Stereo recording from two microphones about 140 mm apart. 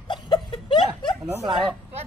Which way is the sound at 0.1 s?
35° left (ahead or behind).